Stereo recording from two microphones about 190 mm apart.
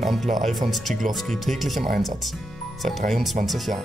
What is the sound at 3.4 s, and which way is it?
Speech, centre (ahead or behind).